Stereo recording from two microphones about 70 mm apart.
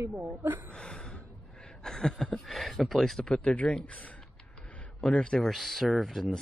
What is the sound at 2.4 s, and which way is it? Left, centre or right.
Speech, centre.